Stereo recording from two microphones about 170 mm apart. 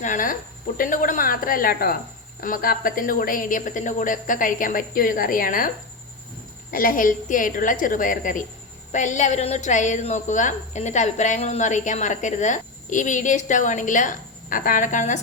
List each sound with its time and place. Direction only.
0.0 s a woman's voice: 50° left (ahead or behind)